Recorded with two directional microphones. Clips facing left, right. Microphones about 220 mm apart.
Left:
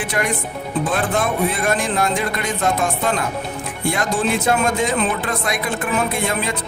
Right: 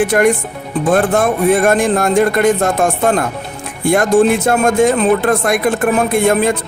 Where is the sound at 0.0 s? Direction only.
50° right (ahead or behind).